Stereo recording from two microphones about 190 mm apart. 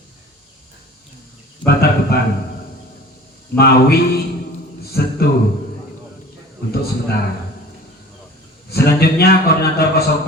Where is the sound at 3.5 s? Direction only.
55° left (ahead or behind).